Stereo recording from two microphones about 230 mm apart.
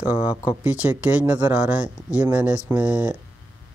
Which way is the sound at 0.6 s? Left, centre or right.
Centre.